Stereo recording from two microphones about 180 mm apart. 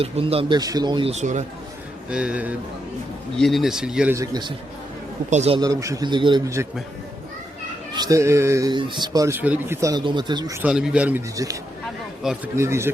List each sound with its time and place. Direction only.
0.0 s speech: 30° right (ahead or behind)
1.1 s speech: 40° right (ahead or behind)
2.0 s a man's voice: 5° right (ahead or behind)
4.1 s speech: 20° right (ahead or behind)
5.3 s speech: 40° right (ahead or behind)
5.5 s speech: 20° right (ahead or behind)
7.9 s speech: 20° right (ahead or behind)
10.6 s a man's voice: 5° right (ahead or behind)
11.3 s a man's voice: 20° right (ahead or behind)